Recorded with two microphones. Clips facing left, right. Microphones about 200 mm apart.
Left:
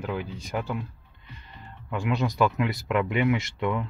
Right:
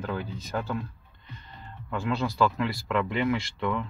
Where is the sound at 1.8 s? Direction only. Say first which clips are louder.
Left 2 dB; 15° left (ahead or behind).